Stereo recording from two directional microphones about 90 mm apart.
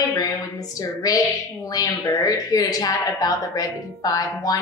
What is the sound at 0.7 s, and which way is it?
A woman's voice, 40° left (ahead or behind).